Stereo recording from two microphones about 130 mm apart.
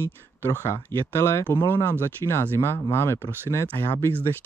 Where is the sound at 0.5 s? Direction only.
20° left (ahead or behind).